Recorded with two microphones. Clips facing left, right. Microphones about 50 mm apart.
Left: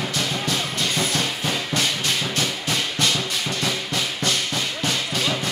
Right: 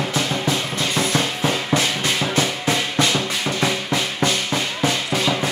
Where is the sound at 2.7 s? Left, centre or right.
Centre.